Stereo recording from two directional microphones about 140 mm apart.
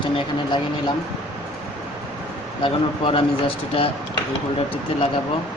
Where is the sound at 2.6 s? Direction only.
40° left (ahead or behind).